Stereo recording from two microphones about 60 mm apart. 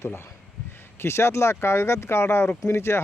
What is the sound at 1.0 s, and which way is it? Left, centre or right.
Speech, left.